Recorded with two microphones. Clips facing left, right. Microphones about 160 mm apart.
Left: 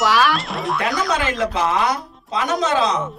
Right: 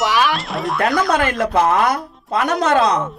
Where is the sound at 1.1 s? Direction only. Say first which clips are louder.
Right 3 dB; 55° right (ahead or behind).